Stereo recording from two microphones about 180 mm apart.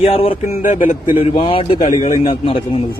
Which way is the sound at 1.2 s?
30° left (ahead or behind).